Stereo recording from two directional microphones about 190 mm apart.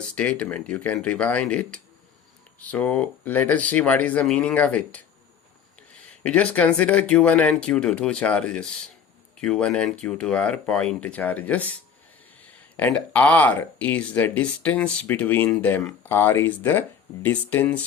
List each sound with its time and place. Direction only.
0.0 s speech: 5° left (ahead or behind)
6.2 s speech: 5° left (ahead or behind)